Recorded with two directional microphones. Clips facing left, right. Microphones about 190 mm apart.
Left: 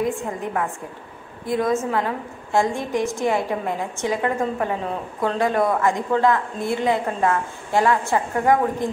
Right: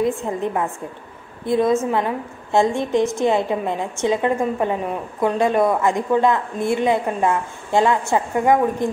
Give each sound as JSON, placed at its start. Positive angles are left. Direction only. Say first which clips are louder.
{"t": 0.0, "sound": "a woman's voice", "louder": "right 3 dB", "side_deg": -20}